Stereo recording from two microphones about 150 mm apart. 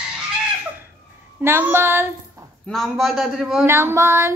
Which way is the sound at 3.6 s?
20° right (ahead or behind).